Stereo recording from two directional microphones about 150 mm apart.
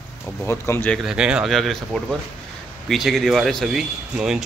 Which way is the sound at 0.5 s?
15° left (ahead or behind).